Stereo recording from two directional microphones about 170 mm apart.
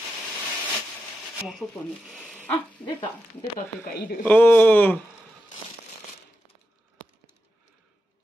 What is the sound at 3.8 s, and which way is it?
Speech, 60° left (ahead or behind).